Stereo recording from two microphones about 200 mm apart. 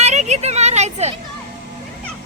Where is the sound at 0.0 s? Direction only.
35° right (ahead or behind).